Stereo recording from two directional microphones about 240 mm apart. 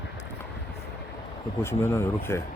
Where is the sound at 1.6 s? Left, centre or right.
Centre.